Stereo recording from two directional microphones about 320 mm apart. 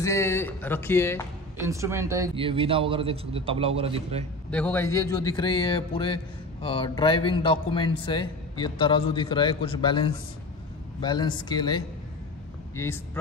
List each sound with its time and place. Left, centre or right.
0.0 s speech: centre
1.6 s a man's voice: centre
4.5 s speech: centre